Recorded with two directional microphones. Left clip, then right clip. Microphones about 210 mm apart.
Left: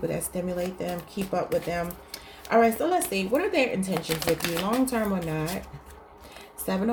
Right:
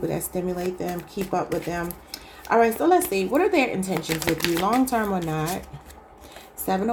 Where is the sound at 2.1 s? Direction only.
30° right (ahead or behind).